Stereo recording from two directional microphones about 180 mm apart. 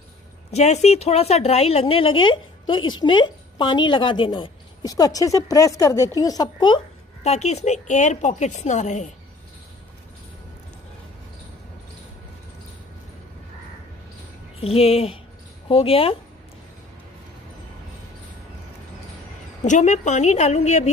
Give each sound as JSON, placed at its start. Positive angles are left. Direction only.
{"t": 0.5, "sound": "a woman's voice", "side_deg": 40}
{"t": 7.2, "sound": "a woman's voice", "side_deg": 35}
{"t": 14.6, "sound": "a woman's voice", "side_deg": 35}
{"t": 19.6, "sound": "a woman's voice", "side_deg": 40}